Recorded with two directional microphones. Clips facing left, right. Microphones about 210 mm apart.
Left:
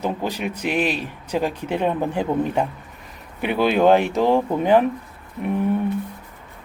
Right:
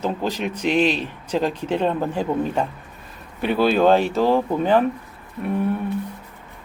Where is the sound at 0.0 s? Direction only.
15° left (ahead or behind).